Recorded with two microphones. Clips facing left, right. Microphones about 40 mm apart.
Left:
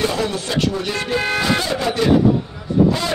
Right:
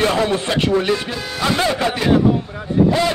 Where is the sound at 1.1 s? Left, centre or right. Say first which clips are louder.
Left 7 dB; left.